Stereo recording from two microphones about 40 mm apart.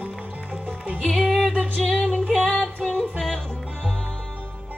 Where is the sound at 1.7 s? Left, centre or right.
Left.